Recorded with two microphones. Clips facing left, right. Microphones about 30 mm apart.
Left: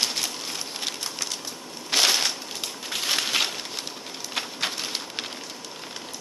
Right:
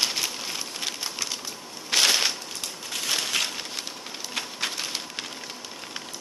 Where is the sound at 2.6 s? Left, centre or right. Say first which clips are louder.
Left 3 dB; centre.